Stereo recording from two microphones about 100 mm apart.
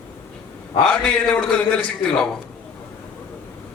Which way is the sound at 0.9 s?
10° left (ahead or behind).